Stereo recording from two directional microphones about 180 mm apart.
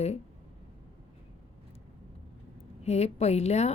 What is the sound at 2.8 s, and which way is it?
Speech, 35° left (ahead or behind).